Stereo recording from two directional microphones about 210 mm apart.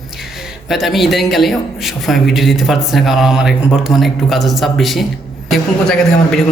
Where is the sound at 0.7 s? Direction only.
Centre (ahead or behind).